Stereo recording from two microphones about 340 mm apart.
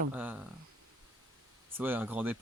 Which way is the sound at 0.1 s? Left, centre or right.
Centre.